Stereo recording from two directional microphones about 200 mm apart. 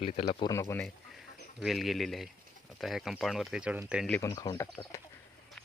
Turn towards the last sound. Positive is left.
turn(degrees=15)  # may be behind; listen again after turning